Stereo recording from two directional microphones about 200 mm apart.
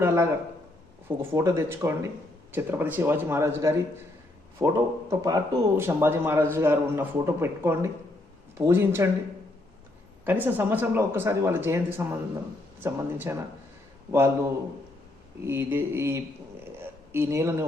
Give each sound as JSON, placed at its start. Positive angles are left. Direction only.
{"t": 0.0, "sound": "a man's voice", "side_deg": -15}
{"t": 10.2, "sound": "a man's voice", "side_deg": -10}
{"t": 15.4, "sound": "a man's voice", "side_deg": -10}
{"t": 16.8, "sound": "a sound", "side_deg": -10}